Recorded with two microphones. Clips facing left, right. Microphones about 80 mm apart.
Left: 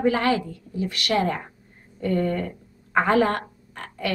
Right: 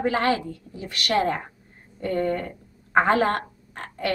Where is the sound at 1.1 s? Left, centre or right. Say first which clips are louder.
Right 1 dB; right.